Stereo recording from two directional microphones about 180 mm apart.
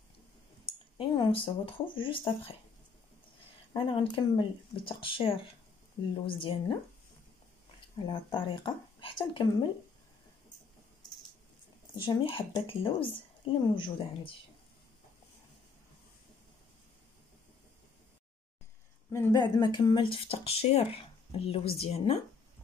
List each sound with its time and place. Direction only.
0.9 s speech: 25° left (ahead or behind)
3.7 s speech: 30° left (ahead or behind)
8.0 s speech: 25° left (ahead or behind)
11.9 s speech: 25° left (ahead or behind)
19.1 s speech: 20° left (ahead or behind)